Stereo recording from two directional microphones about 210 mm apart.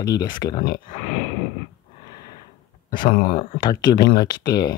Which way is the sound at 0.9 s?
35° left (ahead or behind).